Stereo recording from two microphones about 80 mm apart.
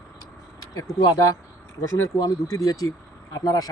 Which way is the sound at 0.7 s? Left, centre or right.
Left.